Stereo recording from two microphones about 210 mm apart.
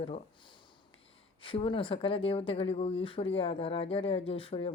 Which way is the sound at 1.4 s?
25° left (ahead or behind).